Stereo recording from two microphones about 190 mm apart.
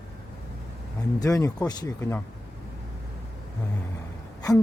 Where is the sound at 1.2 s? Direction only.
15° left (ahead or behind).